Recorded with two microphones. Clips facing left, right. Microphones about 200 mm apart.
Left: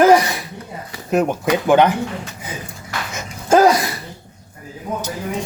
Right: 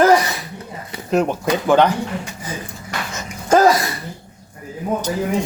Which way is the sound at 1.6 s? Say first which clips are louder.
Left 1 dB; 15° left (ahead or behind).